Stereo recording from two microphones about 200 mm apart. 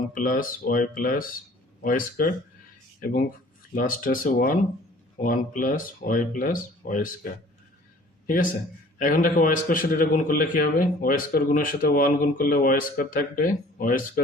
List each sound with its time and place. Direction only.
0.1 s a man's voice: 45° left (ahead or behind)
8.3 s a man's voice: 40° left (ahead or behind)